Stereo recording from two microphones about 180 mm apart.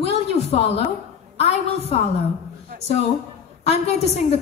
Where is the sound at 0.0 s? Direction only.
35° left (ahead or behind).